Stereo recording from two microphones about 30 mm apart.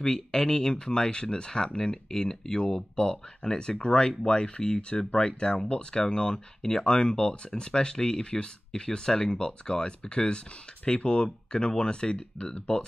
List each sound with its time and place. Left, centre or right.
0.0 s speech: centre; by 5.0 s left
5.1 s speech: left
5.7 s speech: left; by 9.3 s centre
9.3 s speech: left
11.5 s speech: left